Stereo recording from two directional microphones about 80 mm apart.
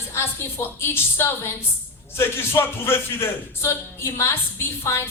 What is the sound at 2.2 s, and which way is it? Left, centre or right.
Speech, left.